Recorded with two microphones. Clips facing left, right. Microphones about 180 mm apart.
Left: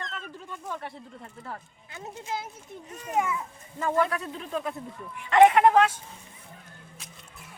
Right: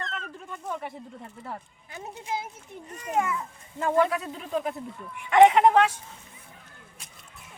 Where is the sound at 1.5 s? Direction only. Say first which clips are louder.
Right 2 dB; 20° right (ahead or behind).